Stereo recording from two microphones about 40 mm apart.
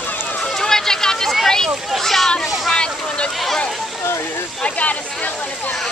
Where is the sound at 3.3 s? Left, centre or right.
Centre.